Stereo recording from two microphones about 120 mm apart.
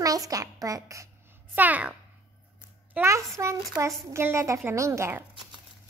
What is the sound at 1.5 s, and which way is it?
Speech, 15° right (ahead or behind).